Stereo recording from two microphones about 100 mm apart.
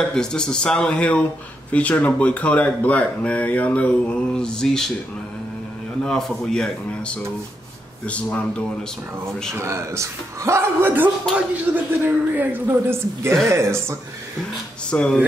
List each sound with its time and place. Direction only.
0.1 s speech: 5° left (ahead or behind)
6.0 s speech: 5° left (ahead or behind)
9.5 s speech: 25° right (ahead or behind)
14.9 s speech: 10° left (ahead or behind)